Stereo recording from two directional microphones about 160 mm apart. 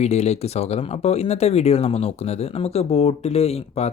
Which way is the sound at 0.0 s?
45° left (ahead or behind).